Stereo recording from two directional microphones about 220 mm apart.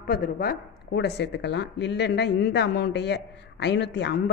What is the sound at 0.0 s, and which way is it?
Speech, 40° left (ahead or behind).